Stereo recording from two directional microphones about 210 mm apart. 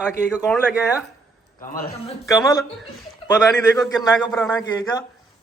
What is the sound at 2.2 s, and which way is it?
Speech, 15° left (ahead or behind).